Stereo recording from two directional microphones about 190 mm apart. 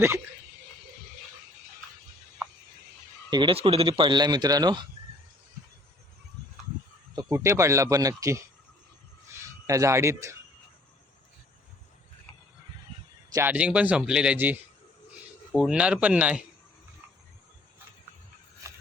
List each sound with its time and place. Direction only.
3.2 s speech: 25° right (ahead or behind)
7.2 s speech: 15° right (ahead or behind)
9.6 s speech: 15° right (ahead or behind)
13.3 s speech: 10° right (ahead or behind)